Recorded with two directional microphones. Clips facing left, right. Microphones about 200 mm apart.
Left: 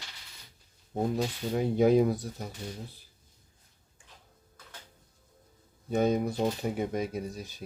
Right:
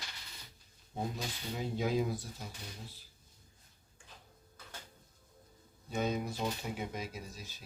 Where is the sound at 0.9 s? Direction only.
55° left (ahead or behind).